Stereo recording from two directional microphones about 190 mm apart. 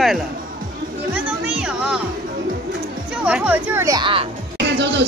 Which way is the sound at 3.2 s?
5° right (ahead or behind).